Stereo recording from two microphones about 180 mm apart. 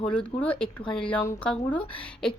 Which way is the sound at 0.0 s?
5° left (ahead or behind).